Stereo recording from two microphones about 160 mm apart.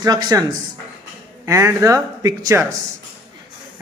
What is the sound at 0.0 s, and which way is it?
Speech, 25° right (ahead or behind).